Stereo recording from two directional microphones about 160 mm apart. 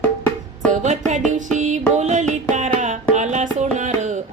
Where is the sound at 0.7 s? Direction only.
50° right (ahead or behind).